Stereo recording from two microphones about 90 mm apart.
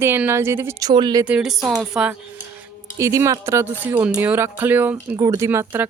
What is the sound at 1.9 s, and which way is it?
Speech, 10° right (ahead or behind).